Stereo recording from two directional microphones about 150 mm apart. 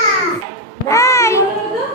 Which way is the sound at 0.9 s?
20° left (ahead or behind).